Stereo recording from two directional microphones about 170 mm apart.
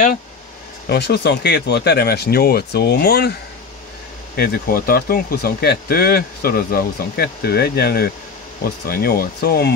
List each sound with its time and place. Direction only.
0.8 s speech: 80° left
4.4 s speech: 60° left (ahead or behind)